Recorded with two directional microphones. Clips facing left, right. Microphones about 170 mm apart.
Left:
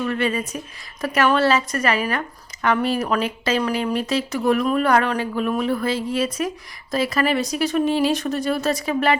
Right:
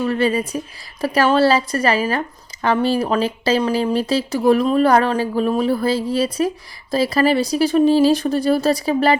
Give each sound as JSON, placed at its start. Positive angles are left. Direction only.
{"t": 0.0, "sound": "speech", "side_deg": -35}